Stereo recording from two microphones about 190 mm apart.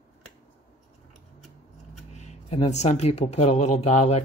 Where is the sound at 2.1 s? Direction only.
35° left (ahead or behind).